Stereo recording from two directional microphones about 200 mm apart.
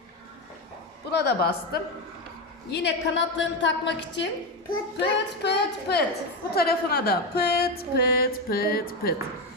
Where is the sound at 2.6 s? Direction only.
60° left (ahead or behind).